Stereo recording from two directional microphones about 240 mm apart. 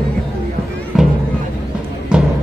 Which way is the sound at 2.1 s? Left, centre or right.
Centre.